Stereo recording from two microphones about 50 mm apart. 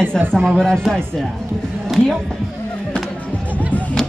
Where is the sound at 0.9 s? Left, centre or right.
Centre.